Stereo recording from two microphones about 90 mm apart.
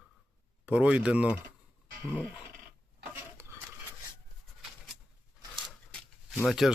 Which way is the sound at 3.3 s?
30° right (ahead or behind).